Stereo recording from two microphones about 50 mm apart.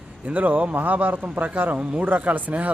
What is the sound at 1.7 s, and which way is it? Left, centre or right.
Speech, right.